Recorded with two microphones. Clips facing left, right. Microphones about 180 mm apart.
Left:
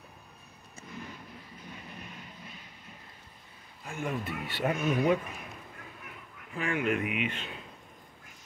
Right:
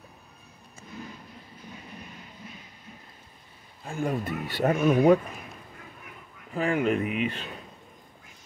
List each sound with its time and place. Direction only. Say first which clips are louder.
3.8 s speech: right 5 dB; 35° right (ahead or behind)
6.5 s speech: right 5 dB; 35° right (ahead or behind)